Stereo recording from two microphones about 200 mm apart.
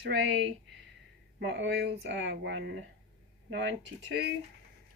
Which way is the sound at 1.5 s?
60° right (ahead or behind).